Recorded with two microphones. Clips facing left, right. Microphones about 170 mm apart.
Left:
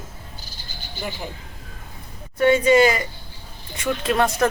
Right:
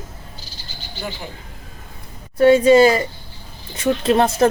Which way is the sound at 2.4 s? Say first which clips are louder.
Right 5 dB; 35° right (ahead or behind).